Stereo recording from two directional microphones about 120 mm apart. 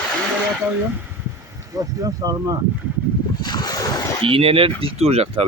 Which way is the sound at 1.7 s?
30° right (ahead or behind).